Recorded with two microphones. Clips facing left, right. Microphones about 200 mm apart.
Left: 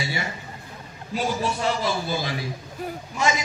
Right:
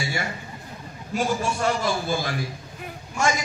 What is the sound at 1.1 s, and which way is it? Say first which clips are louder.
A man's voice: right 1 dB; 50° right (ahead or behind).